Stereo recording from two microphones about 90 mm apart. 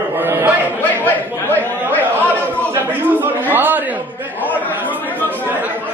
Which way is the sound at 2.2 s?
20° right (ahead or behind).